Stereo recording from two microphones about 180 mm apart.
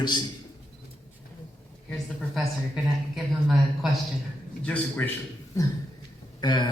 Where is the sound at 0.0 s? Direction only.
25° left (ahead or behind).